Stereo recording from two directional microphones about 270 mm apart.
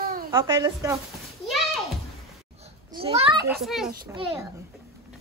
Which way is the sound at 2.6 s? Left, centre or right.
Centre.